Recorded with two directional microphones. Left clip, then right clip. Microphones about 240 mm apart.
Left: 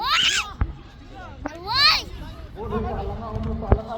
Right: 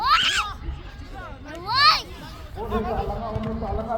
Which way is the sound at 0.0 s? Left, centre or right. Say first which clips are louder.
Right 1 dB; left.